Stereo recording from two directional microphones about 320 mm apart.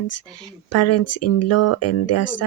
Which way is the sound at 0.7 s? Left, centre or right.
Left.